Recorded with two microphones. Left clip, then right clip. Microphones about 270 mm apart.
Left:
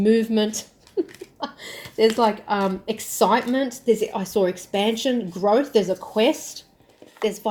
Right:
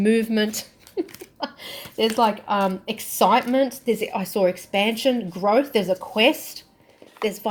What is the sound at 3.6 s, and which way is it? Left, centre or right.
Speech, right.